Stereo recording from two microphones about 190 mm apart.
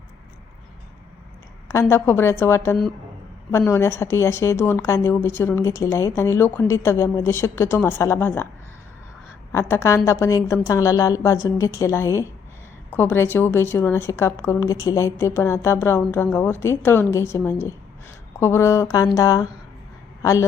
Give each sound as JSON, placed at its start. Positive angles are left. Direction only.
{"t": 1.6, "sound": "a woman's voice", "side_deg": 15}
{"t": 9.5, "sound": "a woman's voice", "side_deg": 15}